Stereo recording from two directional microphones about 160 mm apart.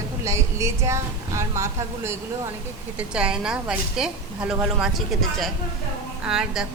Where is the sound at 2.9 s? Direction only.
5° right (ahead or behind).